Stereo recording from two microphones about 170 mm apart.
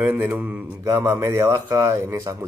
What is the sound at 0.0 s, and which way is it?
Speech, 10° right (ahead or behind).